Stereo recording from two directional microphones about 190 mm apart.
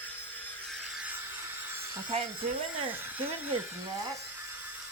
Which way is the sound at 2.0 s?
30° right (ahead or behind).